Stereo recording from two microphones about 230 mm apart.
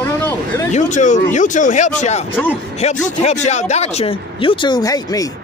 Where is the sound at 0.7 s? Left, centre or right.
Left; by 5.2 s centre.